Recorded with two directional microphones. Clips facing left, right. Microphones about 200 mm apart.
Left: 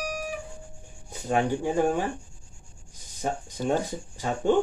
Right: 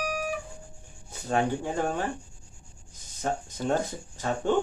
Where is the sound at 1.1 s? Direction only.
15° left (ahead or behind).